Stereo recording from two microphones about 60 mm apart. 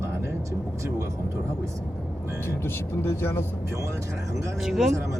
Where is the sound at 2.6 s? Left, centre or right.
Left.